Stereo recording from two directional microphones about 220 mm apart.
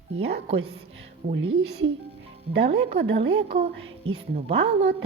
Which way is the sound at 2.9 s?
50° right (ahead or behind).